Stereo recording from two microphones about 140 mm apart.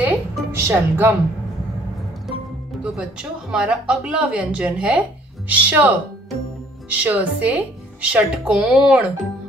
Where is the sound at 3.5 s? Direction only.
5° right (ahead or behind).